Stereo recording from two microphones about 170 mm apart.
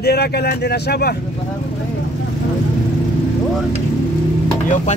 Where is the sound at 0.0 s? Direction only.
70° left (ahead or behind).